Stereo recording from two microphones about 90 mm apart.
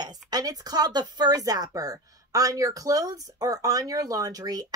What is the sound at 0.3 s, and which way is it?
A woman's voice, 45° right (ahead or behind).